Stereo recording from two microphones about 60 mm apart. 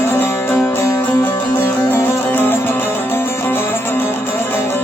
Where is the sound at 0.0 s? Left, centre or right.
Left.